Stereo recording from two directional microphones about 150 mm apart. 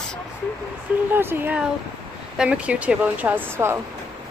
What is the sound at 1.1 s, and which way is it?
Speech, 15° right (ahead or behind).